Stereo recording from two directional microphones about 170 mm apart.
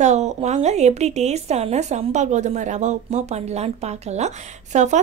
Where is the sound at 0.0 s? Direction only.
45° right (ahead or behind).